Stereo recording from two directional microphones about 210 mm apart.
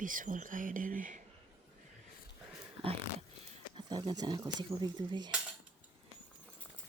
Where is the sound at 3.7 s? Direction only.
20° right (ahead or behind).